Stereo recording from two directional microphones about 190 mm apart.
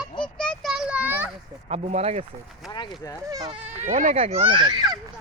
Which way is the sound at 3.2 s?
20° right (ahead or behind).